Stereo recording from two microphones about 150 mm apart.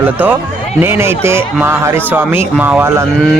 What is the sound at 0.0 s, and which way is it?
Speech, 15° right (ahead or behind).